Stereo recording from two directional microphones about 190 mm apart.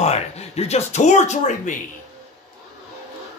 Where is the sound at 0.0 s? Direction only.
35° left (ahead or behind).